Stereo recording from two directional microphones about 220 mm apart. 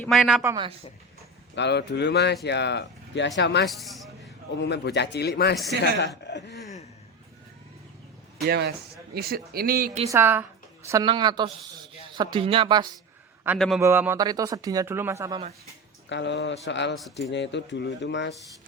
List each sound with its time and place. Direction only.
0.0 s a woman's voice: centre (ahead or behind)
0.4 s speech: 20° right (ahead or behind)
1.5 s speech: 50° left (ahead or behind)
3.7 s speech: centre (ahead or behind)
4.6 s speech: 50° left (ahead or behind)
8.4 s speech: 45° right (ahead or behind)
10.1 s speech: 10° right (ahead or behind)
13.6 s a woman's voice: centre (ahead or behind)
16.0 s speech: 55° left (ahead or behind)